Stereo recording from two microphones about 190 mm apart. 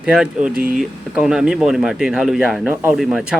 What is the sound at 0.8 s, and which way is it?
Speech, 5° right (ahead or behind).